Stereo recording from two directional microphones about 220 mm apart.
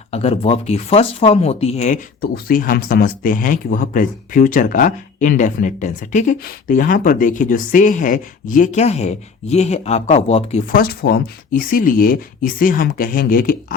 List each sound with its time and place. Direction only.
0.1 s speech: 25° left (ahead or behind)